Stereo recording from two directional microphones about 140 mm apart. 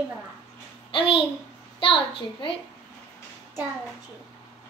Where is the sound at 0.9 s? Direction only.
40° left (ahead or behind).